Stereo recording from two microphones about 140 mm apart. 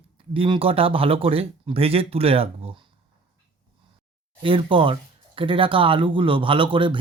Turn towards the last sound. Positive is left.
turn(degrees=-35)  # may be behind; listen again after turning